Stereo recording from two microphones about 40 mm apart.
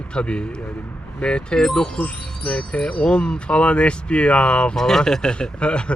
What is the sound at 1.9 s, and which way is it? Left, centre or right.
Speech, left.